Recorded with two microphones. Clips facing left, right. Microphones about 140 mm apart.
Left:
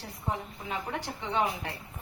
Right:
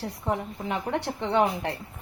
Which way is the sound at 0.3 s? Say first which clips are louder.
Right 5 dB; 70° right (ahead or behind).